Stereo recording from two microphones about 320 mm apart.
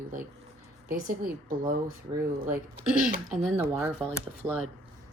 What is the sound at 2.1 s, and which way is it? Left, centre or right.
Speech, centre.